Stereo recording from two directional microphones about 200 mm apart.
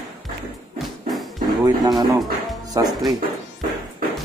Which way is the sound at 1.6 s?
20° right (ahead or behind).